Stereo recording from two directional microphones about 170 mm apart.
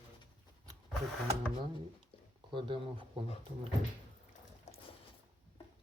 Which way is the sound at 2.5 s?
30° right (ahead or behind).